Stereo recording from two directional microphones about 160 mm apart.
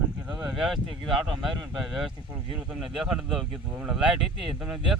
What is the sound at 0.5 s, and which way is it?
Speech, centre (ahead or behind).